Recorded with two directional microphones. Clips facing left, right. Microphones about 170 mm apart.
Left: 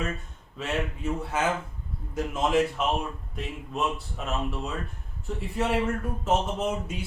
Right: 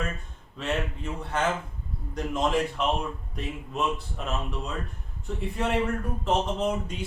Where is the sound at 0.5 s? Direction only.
5° left (ahead or behind).